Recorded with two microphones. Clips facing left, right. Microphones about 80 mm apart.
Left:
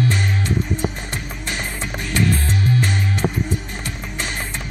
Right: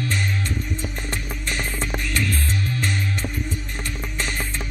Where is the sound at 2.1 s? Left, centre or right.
Left.